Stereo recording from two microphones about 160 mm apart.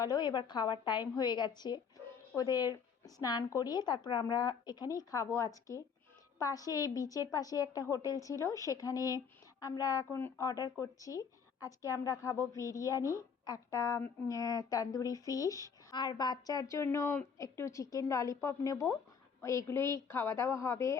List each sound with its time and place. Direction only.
0.0 s a woman's voice: 25° left (ahead or behind)